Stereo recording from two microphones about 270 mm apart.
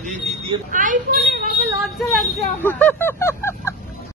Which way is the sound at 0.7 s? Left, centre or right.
Right.